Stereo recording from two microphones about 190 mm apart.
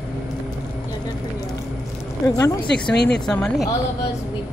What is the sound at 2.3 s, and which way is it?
Speech, 15° left (ahead or behind).